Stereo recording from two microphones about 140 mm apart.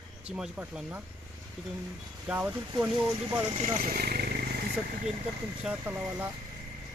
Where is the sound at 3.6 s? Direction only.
85° right.